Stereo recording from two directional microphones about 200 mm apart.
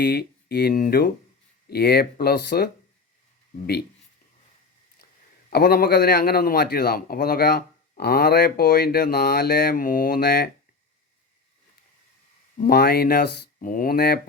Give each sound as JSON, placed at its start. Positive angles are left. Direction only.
{"t": 0.0, "sound": "a man's voice", "side_deg": 50}
{"t": 5.0, "sound": "a sound", "side_deg": 50}
{"t": 5.5, "sound": "a man's voice", "side_deg": 50}
{"t": 12.5, "sound": "a man's voice", "side_deg": 50}